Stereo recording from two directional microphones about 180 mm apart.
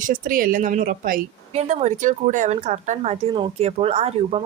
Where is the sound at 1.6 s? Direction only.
40° right (ahead or behind).